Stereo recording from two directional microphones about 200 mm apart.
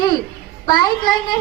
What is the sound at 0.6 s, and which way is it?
Speech, 20° left (ahead or behind).